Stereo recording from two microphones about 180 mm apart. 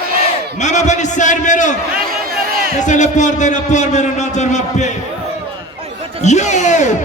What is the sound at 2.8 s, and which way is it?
A man's voice, 40° left (ahead or behind).